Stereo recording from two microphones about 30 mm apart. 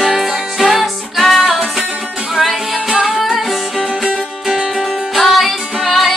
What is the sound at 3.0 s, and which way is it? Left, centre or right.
Music, centre.